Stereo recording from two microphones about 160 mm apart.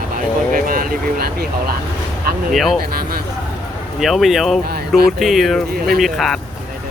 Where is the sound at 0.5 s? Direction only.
60° right (ahead or behind).